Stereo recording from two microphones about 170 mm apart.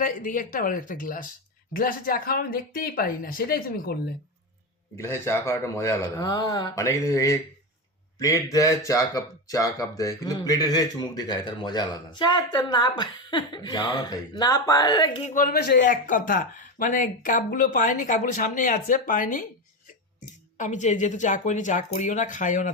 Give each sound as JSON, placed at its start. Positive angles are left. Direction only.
{"t": 0.0, "sound": "speech", "side_deg": 50}
{"t": 4.9, "sound": "speech", "side_deg": 15}
{"t": 15.2, "sound": "speech", "side_deg": 50}
{"t": 15.8, "sound": "speech", "side_deg": 50}